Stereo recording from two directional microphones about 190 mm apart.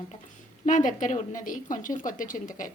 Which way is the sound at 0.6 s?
40° left (ahead or behind).